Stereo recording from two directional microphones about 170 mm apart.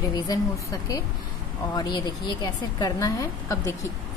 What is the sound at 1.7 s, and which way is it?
A woman's voice, 25° left (ahead or behind).